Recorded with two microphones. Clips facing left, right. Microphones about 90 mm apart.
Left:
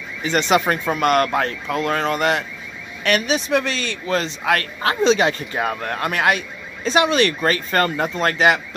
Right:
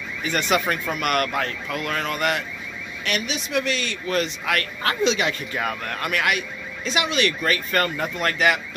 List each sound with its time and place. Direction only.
0.2 s speech: 25° left (ahead or behind)
3.0 s speech: 45° left (ahead or behind); by 8.5 s 30° left (ahead or behind)